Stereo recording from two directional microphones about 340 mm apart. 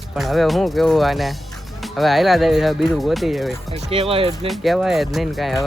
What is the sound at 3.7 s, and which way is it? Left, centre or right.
Speech, centre.